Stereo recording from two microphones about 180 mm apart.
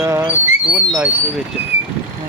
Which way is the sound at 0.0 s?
15° right (ahead or behind).